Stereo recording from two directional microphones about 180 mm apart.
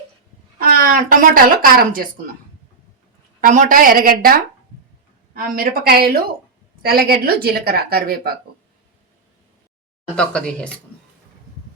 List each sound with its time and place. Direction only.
0.6 s speech: 50° right (ahead or behind)
3.4 s a woman's voice: 45° right (ahead or behind)
10.2 s speech: 5° left (ahead or behind)